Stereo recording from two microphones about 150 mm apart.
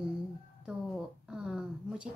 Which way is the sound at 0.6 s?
5° right (ahead or behind).